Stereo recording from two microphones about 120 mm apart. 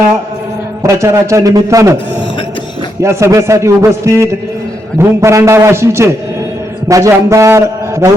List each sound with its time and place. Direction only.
0.8 s a man's voice: 25° right (ahead or behind)
3.0 s a man's voice: 25° right (ahead or behind)